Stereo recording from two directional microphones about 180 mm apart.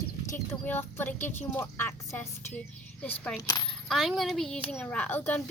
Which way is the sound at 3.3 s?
20° left (ahead or behind).